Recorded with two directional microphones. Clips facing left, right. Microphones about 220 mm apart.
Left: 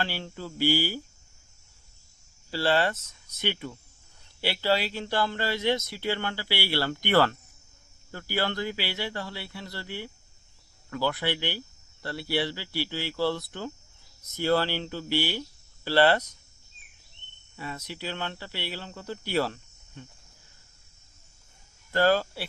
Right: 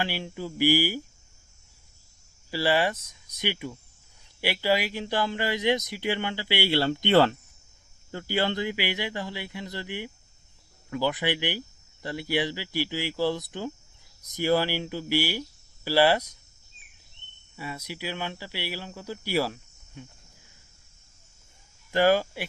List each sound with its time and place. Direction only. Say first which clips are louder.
0.0 s speech: right 2 dB; 15° right (ahead or behind)
2.5 s speech: right 1 dB; 10° right (ahead or behind)
17.6 s speech: right 1 dB; 10° right (ahead or behind)
21.9 s speech: right 2 dB; 15° right (ahead or behind)